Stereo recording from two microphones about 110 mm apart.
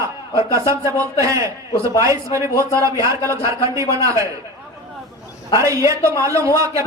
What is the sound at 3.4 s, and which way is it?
Speech, 30° right (ahead or behind).